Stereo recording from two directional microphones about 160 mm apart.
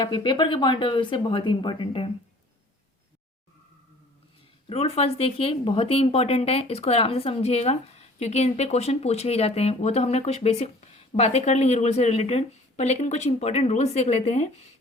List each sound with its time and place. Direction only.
0.0 s speech: 30° left (ahead or behind)
4.7 s speech: 40° left (ahead or behind)